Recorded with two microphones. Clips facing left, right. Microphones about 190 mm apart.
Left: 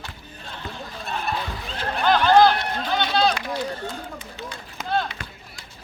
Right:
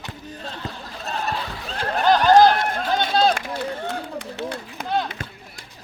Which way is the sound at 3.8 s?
70° right (ahead or behind).